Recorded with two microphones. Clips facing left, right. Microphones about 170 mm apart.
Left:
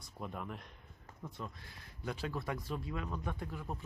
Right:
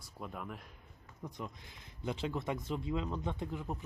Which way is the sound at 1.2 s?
15° right (ahead or behind).